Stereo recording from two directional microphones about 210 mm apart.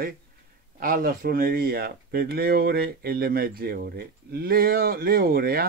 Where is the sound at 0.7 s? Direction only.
40° right (ahead or behind).